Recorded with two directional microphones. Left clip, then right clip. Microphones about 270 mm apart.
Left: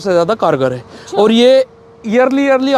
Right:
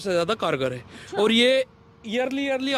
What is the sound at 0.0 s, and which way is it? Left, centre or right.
A man's voice, centre.